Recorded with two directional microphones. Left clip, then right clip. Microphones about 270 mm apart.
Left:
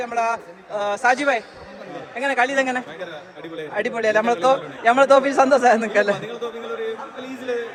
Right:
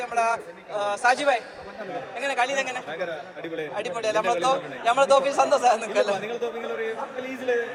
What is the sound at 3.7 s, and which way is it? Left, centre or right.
A man's voice, left.